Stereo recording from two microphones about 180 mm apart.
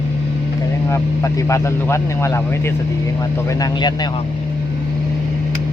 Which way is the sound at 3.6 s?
25° left (ahead or behind).